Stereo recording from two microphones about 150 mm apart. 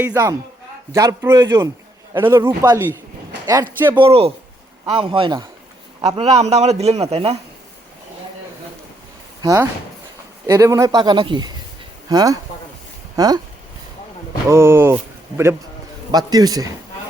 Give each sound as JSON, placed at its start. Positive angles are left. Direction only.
{"t": 0.1, "sound": "a man's voice", "side_deg": -20}
{"t": 2.1, "sound": "a man's voice", "side_deg": -15}
{"t": 3.9, "sound": "a man's voice", "side_deg": -40}
{"t": 9.4, "sound": "a man's voice", "side_deg": -20}
{"t": 14.5, "sound": "a man's voice", "side_deg": -15}
{"t": 16.1, "sound": "a man's voice", "side_deg": -25}